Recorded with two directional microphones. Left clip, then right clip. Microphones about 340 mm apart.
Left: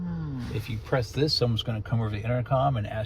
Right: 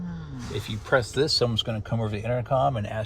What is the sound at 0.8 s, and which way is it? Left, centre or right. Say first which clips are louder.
Speech: right 4 dB; right.